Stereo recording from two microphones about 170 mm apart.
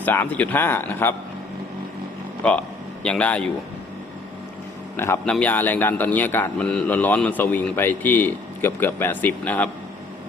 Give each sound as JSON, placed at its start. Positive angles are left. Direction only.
{"t": 0.0, "sound": "speech", "side_deg": 10}
{"t": 2.4, "sound": "a man's voice", "side_deg": 5}
{"t": 4.9, "sound": "speech", "side_deg": 15}